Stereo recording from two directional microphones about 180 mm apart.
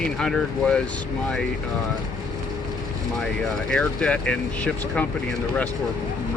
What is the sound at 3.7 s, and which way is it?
Speech, 5° left (ahead or behind).